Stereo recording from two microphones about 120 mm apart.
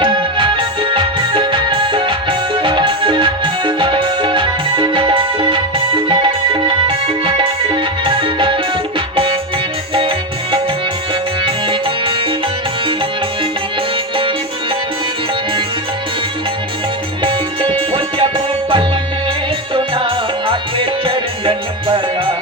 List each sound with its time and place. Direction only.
0.0 s music: 45° right (ahead or behind)
11.4 s music: 45° right (ahead or behind)
17.2 s music: 45° right (ahead or behind)